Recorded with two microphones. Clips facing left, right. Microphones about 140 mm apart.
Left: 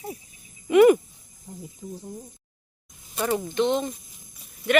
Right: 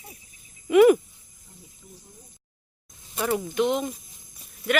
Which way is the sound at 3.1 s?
5° right (ahead or behind).